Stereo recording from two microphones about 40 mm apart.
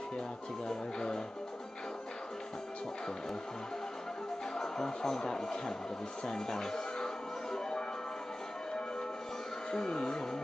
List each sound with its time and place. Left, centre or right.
0.7 s speech: centre
4.6 s speech: centre
9.7 s speech: centre